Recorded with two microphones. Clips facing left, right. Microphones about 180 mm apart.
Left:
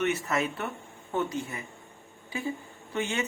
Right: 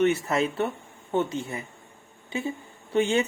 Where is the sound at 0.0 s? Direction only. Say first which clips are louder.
Right 5 dB; 30° right (ahead or behind).